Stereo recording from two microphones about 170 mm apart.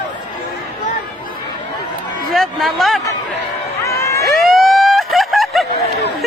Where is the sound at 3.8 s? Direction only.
15° left (ahead or behind).